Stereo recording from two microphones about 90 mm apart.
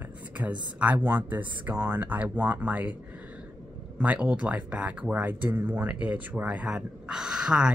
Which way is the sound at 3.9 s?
15° right (ahead or behind).